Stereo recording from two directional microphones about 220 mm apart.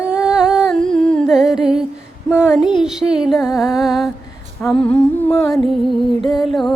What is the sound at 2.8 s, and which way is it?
Music, 5° right (ahead or behind).